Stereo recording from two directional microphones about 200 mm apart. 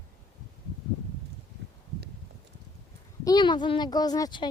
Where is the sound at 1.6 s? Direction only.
55° right (ahead or behind).